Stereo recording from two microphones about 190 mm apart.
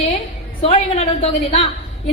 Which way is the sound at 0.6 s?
30° left (ahead or behind).